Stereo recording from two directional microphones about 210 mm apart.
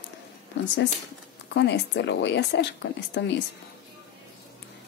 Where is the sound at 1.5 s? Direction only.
55° left (ahead or behind).